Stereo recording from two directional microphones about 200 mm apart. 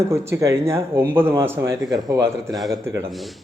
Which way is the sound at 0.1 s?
15° right (ahead or behind).